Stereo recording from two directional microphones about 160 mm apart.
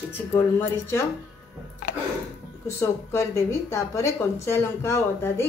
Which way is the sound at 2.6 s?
20° left (ahead or behind).